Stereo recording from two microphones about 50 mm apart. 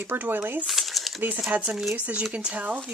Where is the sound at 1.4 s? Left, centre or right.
Right.